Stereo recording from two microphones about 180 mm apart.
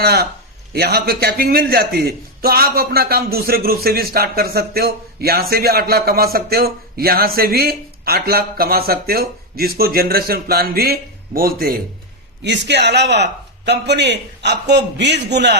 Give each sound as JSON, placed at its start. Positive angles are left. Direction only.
{"t": 0.0, "sound": "a man's voice", "side_deg": -60}
{"t": 12.4, "sound": "speech", "side_deg": -75}